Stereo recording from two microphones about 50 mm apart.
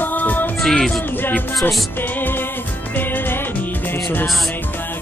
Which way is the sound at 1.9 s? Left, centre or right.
Left.